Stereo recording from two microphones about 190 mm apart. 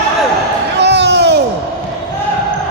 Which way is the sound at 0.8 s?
65° right (ahead or behind).